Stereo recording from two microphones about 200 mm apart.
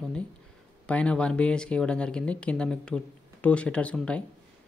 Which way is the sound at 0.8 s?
5° left (ahead or behind).